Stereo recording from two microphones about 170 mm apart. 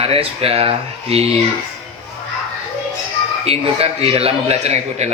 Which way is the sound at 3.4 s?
35° right (ahead or behind).